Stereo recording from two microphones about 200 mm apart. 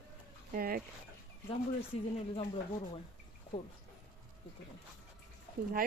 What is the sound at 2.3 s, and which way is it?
Speech, 30° left (ahead or behind).